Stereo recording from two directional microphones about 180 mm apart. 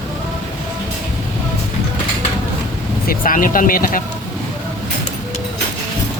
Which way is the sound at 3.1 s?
50° left (ahead or behind).